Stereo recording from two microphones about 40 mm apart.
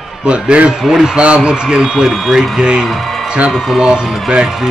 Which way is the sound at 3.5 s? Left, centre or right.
Centre.